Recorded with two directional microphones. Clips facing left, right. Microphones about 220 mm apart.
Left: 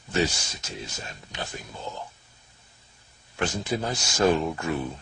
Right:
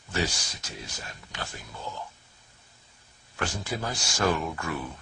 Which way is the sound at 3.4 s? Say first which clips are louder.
Left 4 dB; 25° left (ahead or behind).